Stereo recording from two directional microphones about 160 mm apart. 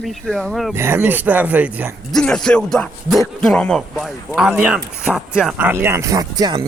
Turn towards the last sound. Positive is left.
turn(degrees=-25)  # may be behind; listen again after turning